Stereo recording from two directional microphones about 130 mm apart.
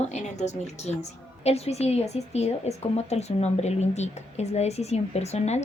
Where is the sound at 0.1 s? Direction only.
60° left (ahead or behind).